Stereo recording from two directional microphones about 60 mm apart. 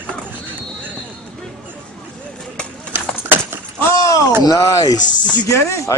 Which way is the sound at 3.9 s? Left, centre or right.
Left.